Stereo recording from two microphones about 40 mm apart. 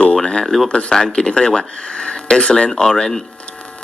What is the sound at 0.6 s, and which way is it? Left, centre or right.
Speech, left.